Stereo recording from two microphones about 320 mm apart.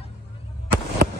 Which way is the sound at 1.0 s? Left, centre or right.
Right.